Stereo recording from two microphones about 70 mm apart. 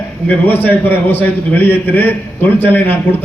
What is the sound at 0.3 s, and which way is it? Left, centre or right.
A man's voice, left.